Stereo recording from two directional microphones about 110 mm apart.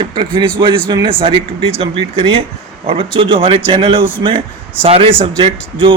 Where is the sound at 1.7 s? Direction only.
65° right (ahead or behind).